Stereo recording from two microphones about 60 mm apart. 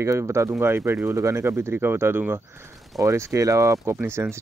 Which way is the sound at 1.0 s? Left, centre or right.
Right.